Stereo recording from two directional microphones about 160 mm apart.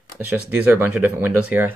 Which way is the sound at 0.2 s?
10° right (ahead or behind).